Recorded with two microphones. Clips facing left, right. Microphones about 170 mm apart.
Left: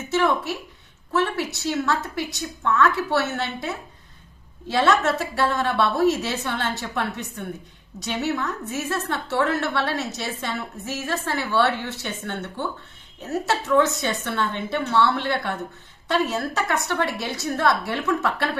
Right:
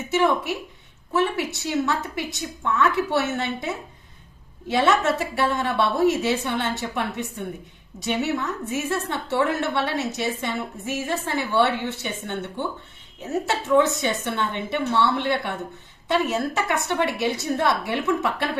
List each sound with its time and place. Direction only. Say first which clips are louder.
0.1 s a woman's voice: right 1 dB; 15° right (ahead or behind)
8.0 s a woman's voice: right 1 dB; 15° right (ahead or behind)
13.5 s a woman's voice: even; 20° right (ahead or behind)